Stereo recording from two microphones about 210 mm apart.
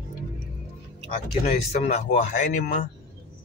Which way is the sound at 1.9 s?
35° left (ahead or behind).